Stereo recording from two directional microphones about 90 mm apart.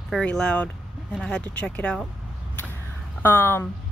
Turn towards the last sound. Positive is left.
turn(degrees=25)  # may be behind; listen again after turning